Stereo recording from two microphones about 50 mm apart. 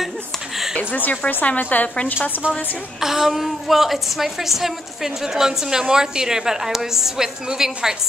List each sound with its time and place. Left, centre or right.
0.7 s speech: left
2.4 s a woman's voice: centre
3.0 s a woman's voice: centre